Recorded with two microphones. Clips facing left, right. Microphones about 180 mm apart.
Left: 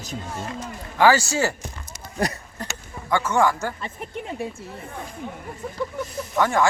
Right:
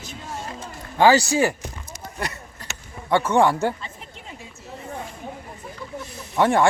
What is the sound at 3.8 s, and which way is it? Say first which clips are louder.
Speech: left 8 dB; 55° left (ahead or behind).